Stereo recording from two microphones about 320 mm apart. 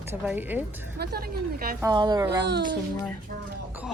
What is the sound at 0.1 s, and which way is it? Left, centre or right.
Speech, centre.